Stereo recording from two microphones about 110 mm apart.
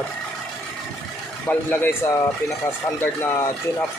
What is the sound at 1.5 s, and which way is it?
Speech, 20° left (ahead or behind).